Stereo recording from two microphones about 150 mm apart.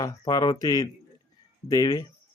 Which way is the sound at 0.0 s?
25° left (ahead or behind).